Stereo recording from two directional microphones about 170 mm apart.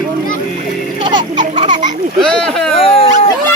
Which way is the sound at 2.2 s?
5° left (ahead or behind).